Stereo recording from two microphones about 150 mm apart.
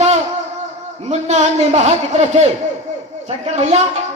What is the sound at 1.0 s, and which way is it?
Speech, 50° right (ahead or behind).